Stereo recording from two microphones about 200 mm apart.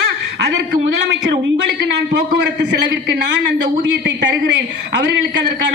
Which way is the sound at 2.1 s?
60° right (ahead or behind).